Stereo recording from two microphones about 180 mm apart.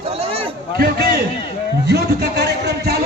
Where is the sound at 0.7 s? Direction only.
60° right (ahead or behind).